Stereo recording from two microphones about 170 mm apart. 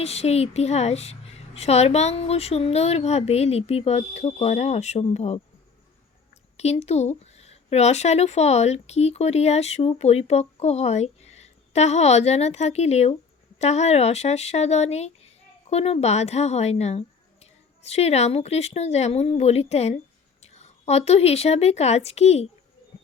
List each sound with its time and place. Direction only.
0.0 s speech: 40° left (ahead or behind)
6.6 s speech: 40° left (ahead or behind)